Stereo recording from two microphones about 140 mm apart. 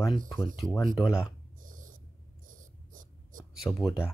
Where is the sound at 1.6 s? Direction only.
70° right (ahead or behind).